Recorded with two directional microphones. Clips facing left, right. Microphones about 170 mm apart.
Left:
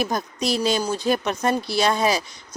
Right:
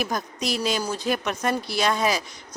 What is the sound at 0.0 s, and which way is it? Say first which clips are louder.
Speech: left 3 dB; 30° left (ahead or behind).